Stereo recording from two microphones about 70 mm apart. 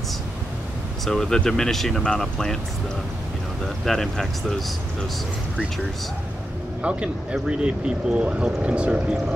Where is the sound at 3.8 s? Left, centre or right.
Centre.